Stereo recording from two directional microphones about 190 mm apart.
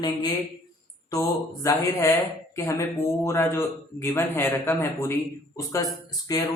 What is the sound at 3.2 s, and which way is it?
Speech, 15° left (ahead or behind).